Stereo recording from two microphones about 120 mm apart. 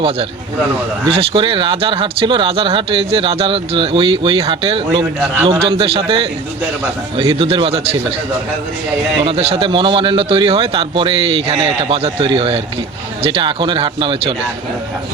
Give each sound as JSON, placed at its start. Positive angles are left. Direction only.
{"t": 1.0, "sound": "speech", "side_deg": -50}
{"t": 9.2, "sound": "speech", "side_deg": -55}